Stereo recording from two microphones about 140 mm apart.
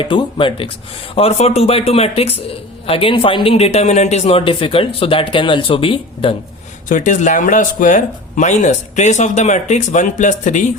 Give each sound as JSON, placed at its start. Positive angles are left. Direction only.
{"t": 0.0, "sound": "a man's voice", "side_deg": 35}
{"t": 6.8, "sound": "speech", "side_deg": 70}